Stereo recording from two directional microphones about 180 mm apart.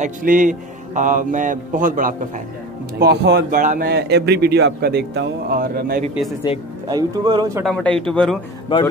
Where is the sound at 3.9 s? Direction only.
65° right (ahead or behind).